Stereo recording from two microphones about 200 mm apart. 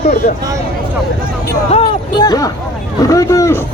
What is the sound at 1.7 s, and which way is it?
Speech, 25° left (ahead or behind).